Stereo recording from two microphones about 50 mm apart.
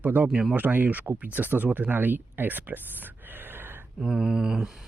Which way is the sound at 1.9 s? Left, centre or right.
Right.